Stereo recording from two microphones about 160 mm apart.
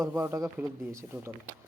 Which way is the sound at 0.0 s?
15° right (ahead or behind).